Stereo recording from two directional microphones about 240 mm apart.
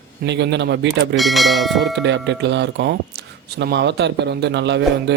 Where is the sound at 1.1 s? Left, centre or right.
Centre.